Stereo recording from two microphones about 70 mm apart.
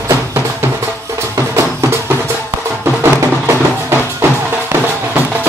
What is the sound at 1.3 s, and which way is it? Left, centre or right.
Music, right.